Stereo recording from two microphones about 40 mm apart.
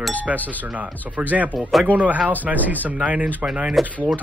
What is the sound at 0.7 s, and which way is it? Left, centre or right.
Speech, right.